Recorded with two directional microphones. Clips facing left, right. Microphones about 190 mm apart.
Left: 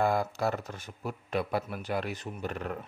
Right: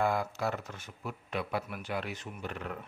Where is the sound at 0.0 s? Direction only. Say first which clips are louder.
Left 3 dB; 35° left (ahead or behind).